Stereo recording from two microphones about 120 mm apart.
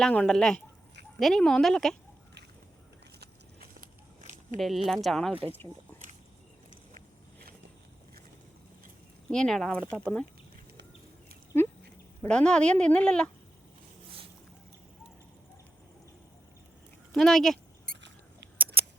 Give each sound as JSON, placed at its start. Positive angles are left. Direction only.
{"t": 0.0, "sound": "speech", "side_deg": 10}
{"t": 4.5, "sound": "speech", "side_deg": 0}
{"t": 9.3, "sound": "speech", "side_deg": 5}
{"t": 11.5, "sound": "a sound", "side_deg": 20}
{"t": 12.3, "sound": "speech", "side_deg": 10}
{"t": 17.2, "sound": "rodents", "side_deg": 5}
{"t": 18.5, "sound": "scissors", "side_deg": -15}